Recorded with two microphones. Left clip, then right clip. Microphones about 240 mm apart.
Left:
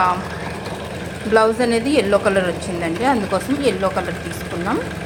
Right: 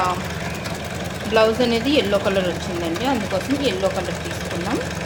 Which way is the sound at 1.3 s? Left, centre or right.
Centre.